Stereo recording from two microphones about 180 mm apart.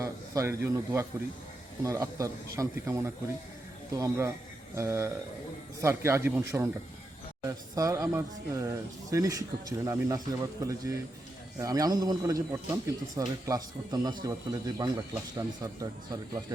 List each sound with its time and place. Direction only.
0.0 s a man's voice: 15° right (ahead or behind)